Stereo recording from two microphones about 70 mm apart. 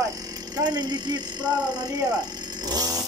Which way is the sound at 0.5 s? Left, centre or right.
Right.